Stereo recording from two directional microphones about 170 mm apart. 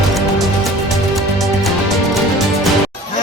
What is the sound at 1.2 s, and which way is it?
Music, centre (ahead or behind).